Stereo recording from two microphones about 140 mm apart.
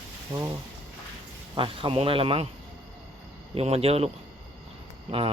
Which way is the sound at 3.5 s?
45° right (ahead or behind).